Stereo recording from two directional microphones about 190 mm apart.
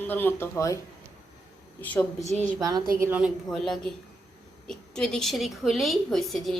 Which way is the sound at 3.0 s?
10° right (ahead or behind).